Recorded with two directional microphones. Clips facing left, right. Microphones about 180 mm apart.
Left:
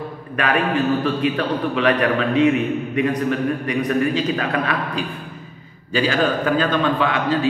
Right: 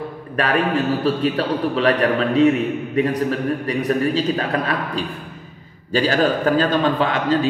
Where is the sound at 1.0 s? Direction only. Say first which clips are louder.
Right 1 dB; 35° right (ahead or behind).